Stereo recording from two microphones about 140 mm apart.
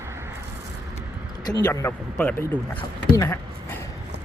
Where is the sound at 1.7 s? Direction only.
15° left (ahead or behind).